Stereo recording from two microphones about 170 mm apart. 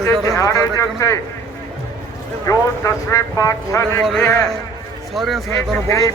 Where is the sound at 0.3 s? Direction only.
20° left (ahead or behind).